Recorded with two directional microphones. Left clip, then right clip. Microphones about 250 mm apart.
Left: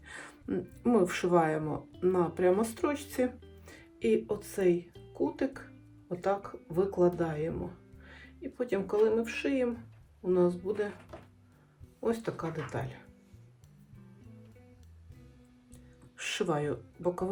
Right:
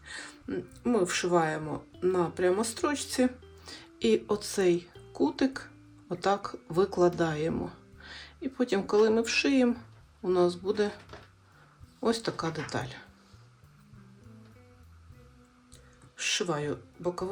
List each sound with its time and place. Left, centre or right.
0.1 s speech: centre
11.9 s speech: centre
16.1 s speech: centre